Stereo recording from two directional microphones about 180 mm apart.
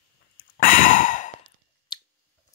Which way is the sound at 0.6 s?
50° left (ahead or behind).